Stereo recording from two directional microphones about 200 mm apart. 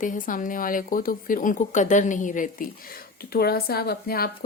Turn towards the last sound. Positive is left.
turn(degrees=50)  # may be behind; listen again after turning